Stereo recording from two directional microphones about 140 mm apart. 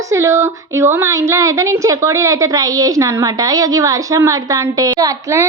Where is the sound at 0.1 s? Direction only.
20° right (ahead or behind).